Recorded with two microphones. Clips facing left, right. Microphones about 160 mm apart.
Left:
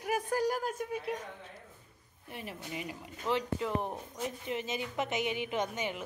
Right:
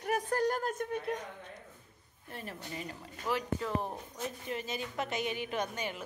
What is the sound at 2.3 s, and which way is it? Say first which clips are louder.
Speech: left 1 dB; 10° left (ahead or behind).